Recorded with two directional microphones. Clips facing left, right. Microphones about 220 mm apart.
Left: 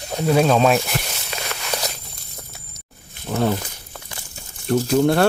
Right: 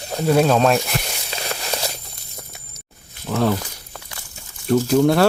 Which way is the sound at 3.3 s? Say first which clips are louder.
Right 1 dB; 20° left (ahead or behind).